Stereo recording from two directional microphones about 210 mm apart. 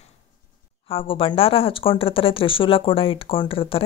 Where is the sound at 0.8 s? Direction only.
25° left (ahead or behind).